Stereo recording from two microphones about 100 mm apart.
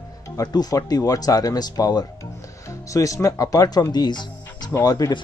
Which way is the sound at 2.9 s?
35° left (ahead or behind).